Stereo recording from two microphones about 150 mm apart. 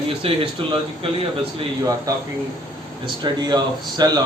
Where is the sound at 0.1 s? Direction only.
40° right (ahead or behind).